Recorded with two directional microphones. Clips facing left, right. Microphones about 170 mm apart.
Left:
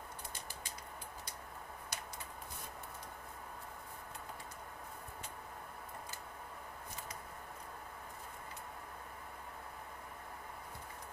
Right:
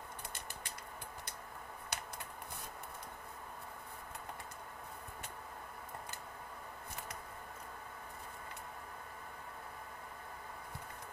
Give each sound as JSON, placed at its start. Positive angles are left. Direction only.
{"t": 1.9, "sound": "typing", "side_deg": -65}